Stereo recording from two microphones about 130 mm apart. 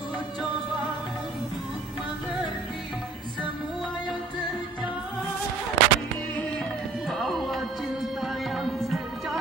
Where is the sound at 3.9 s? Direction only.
35° left (ahead or behind).